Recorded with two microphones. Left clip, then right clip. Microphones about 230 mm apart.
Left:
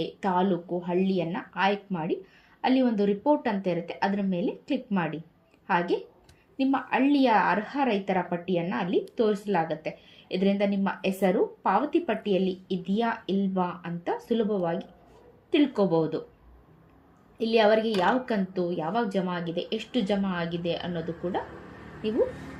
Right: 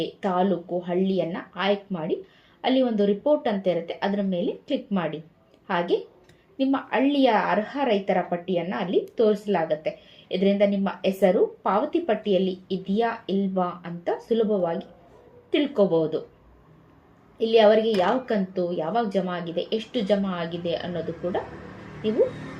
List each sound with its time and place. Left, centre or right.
0.2 s a woman's voice: left
17.3 s a woman's voice: left